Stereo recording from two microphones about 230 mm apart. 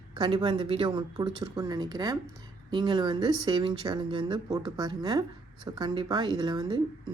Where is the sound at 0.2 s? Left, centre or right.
Centre.